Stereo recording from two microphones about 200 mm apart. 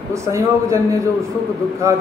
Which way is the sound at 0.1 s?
15° right (ahead or behind).